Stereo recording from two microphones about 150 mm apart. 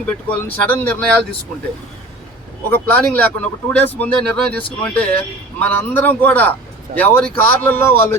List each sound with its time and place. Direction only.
0.0 s speech: 10° left (ahead or behind)
2.6 s speech: 10° left (ahead or behind)